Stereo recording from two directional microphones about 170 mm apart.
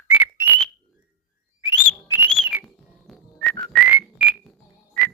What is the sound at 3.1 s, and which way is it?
Whistling, centre (ahead or behind).